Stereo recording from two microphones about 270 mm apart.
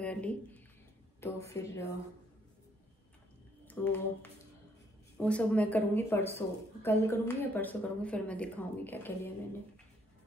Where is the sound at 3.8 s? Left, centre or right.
Centre.